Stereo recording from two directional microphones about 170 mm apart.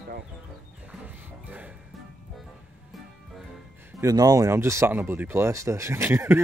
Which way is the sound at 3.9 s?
20° right (ahead or behind).